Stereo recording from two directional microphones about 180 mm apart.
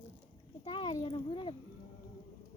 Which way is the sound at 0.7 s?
25° left (ahead or behind).